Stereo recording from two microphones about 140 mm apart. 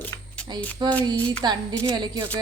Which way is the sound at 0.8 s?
30° right (ahead or behind).